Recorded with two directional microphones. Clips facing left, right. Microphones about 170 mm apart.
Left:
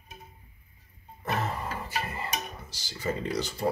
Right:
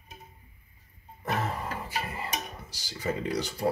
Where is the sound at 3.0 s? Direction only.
10° right (ahead or behind).